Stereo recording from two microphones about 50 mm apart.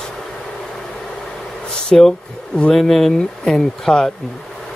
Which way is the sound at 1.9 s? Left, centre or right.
Centre.